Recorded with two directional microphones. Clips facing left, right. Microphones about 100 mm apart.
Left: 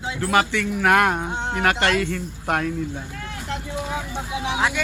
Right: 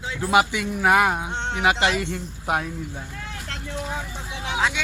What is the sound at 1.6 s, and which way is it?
Speech, 10° right (ahead or behind).